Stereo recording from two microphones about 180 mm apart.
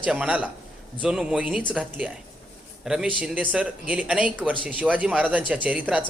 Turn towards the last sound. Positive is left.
turn(degrees=-10)  # may be behind; listen again after turning